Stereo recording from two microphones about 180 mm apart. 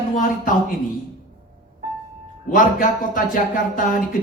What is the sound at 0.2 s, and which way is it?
Speech, 50° left (ahead or behind).